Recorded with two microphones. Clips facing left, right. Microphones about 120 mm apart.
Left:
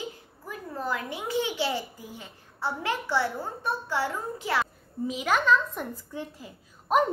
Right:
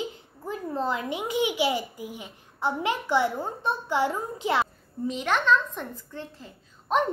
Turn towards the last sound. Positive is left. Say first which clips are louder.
# left 1 dB
turn(degrees=10)  # may be behind; listen again after turning